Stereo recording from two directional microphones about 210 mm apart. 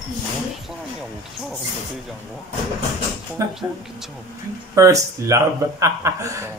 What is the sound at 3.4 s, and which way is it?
Speech, 15° right (ahead or behind).